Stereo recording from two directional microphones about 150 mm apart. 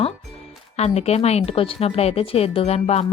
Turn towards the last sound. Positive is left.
turn(degrees=45)  # may be behind; listen again after turning